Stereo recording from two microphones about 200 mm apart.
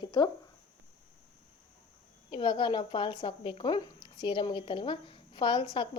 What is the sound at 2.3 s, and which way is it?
Speech, 25° left (ahead or behind).